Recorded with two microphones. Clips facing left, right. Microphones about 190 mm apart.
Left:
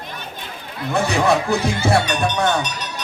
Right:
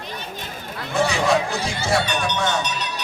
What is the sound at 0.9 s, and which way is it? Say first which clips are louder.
Speech: left 2 dB; 60° left (ahead or behind).